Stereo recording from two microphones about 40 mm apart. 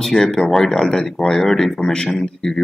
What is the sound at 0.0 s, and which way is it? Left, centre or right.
Speech, centre.